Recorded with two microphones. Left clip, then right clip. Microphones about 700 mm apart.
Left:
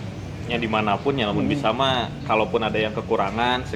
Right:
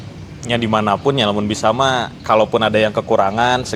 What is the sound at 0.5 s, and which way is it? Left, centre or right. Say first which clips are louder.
Speech: right 6 dB; right.